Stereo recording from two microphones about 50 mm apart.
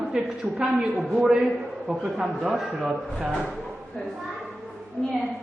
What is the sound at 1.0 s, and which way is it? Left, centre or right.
A woman's voice, centre.